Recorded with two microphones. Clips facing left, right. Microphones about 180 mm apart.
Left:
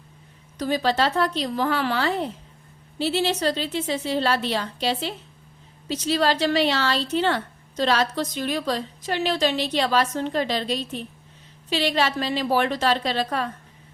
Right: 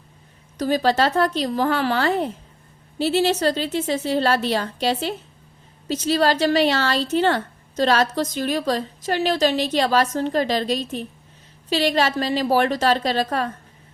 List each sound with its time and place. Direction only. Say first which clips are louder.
0.6 s speech: right 3 dB; 45° right (ahead or behind)